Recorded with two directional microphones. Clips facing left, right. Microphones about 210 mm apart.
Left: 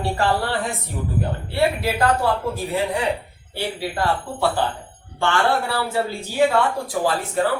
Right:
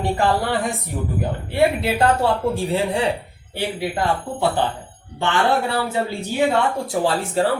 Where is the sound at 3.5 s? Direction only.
20° right (ahead or behind).